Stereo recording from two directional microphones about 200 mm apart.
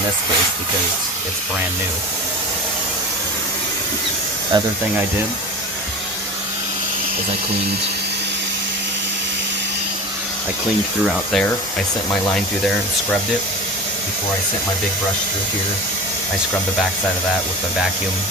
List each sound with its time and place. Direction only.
4.5 s speech: 20° right (ahead or behind)
11.0 s speech: centre (ahead or behind)